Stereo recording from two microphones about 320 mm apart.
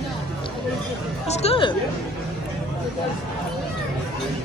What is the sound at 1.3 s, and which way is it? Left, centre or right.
Speech, centre.